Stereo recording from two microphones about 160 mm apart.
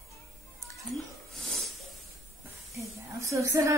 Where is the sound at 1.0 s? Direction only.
Centre (ahead or behind).